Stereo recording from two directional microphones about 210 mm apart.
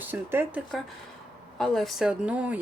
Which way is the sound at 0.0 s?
10° right (ahead or behind).